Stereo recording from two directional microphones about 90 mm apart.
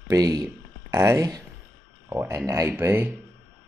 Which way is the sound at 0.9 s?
35° right (ahead or behind).